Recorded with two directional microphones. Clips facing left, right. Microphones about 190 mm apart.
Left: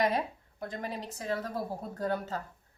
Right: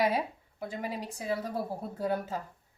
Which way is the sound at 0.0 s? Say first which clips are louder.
Right 1 dB; 5° right (ahead or behind).